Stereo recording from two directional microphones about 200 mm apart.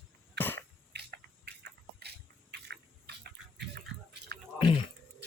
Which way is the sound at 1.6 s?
55° right (ahead or behind).